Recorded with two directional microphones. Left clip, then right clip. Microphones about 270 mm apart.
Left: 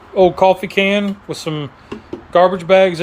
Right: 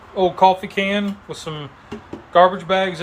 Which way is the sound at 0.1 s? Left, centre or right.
Left.